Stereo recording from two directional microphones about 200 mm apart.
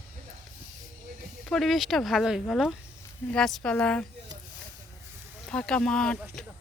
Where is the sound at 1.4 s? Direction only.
Centre (ahead or behind).